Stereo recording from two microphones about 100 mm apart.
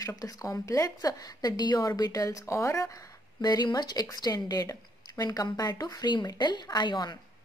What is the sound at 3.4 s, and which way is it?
Speech, 45° left (ahead or behind).